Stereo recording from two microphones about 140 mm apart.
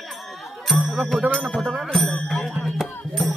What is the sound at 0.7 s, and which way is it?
Music, 5° right (ahead or behind).